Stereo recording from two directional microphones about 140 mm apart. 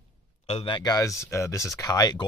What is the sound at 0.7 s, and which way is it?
Speech, 30° left (ahead or behind).